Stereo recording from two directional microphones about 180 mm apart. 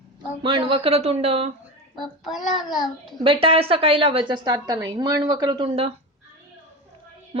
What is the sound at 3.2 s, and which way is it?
A woman's voice, 30° right (ahead or behind).